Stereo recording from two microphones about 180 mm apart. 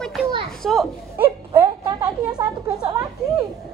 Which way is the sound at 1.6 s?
20° right (ahead or behind).